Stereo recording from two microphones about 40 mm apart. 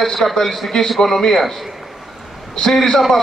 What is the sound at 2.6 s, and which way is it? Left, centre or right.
Speech, centre.